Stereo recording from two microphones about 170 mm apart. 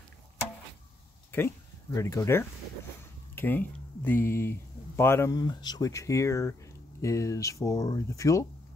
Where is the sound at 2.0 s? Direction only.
20° left (ahead or behind).